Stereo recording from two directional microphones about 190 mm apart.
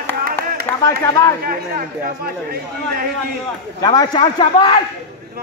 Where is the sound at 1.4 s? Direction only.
50° right (ahead or behind).